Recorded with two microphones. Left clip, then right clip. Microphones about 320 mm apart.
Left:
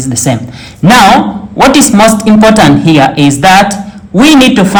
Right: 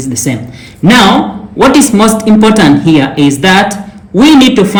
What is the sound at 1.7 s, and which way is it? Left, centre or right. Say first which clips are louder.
A woman's voice: left 3 dB; left.